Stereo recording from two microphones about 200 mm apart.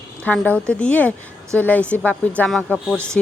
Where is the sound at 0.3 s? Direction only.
5° left (ahead or behind).